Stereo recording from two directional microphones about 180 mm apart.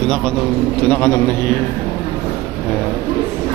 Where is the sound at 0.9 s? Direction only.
10° left (ahead or behind).